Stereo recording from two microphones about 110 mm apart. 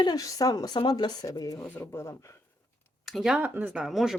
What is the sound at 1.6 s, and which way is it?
Speech, 20° left (ahead or behind).